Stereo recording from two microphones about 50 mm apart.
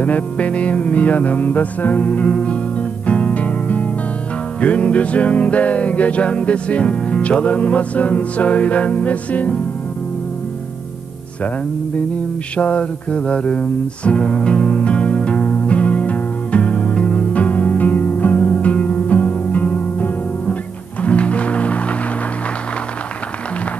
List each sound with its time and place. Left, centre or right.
0.0 s music: left
12.5 s music: left